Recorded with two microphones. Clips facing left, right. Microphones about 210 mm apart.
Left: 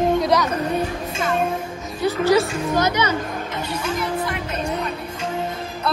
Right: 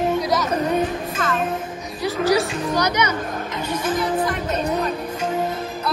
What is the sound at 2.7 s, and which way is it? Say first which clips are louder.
Speech: left 1 dB; 20° left (ahead or behind).